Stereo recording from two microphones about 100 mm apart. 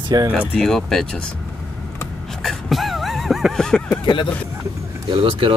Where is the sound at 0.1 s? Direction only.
40° right (ahead or behind).